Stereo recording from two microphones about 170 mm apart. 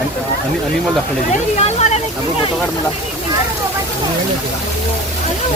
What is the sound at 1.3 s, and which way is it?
Speech, 40° left (ahead or behind).